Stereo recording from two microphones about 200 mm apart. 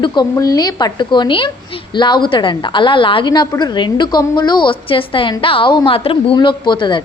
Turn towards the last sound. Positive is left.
turn(degrees=25)  # may be behind; listen again after turning